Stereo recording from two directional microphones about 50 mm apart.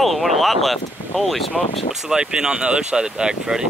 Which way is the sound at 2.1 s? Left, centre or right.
Centre.